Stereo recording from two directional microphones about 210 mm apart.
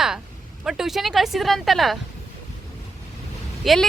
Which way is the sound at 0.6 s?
Centre (ahead or behind).